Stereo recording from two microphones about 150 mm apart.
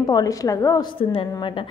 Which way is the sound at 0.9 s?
35° left (ahead or behind).